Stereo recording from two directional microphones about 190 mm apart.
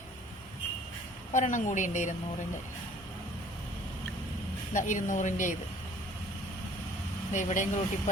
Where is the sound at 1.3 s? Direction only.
40° left (ahead or behind).